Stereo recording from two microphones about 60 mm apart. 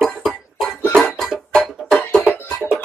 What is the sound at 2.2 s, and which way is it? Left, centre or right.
Music, centre.